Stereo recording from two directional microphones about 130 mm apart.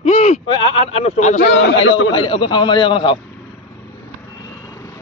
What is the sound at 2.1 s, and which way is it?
A man's voice, 40° left (ahead or behind).